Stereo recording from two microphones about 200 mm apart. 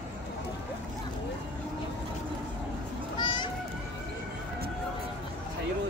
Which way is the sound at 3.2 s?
20° left (ahead or behind).